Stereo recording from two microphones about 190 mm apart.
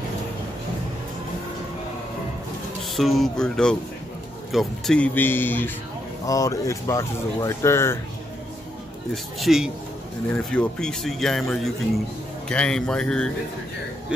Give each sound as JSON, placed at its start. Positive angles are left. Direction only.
{"t": 2.9, "sound": "speech", "side_deg": 0}
{"t": 9.1, "sound": "speech", "side_deg": 0}